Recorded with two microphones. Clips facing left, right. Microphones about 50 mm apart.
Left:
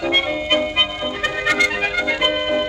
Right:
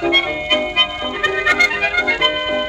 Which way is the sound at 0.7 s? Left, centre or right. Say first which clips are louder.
Right 2 dB; right.